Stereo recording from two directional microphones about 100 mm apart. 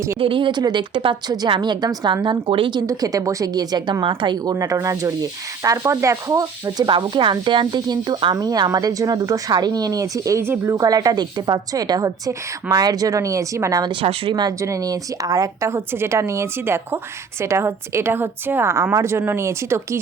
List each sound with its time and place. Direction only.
0.2 s a woman's voice: 60° right (ahead or behind)
2.8 s a woman's voice: 35° right (ahead or behind)
4.5 s speech: 35° right (ahead or behind)
6.8 s speech: 50° right (ahead or behind); by 13.9 s 35° right (ahead or behind)
14.0 s speech: 70° right (ahead or behind)
14.6 s a woman's voice: 35° right (ahead or behind)